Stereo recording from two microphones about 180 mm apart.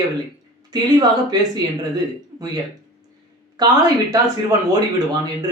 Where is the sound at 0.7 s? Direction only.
20° right (ahead or behind).